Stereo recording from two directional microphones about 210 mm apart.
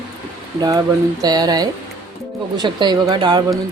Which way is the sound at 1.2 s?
20° right (ahead or behind).